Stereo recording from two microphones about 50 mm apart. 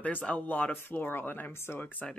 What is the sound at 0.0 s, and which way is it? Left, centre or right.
Speech, left.